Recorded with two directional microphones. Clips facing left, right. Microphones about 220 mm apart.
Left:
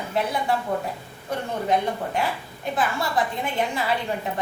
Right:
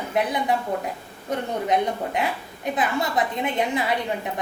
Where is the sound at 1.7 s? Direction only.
20° right (ahead or behind).